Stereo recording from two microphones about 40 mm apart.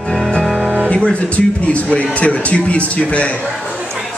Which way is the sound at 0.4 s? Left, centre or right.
Centre.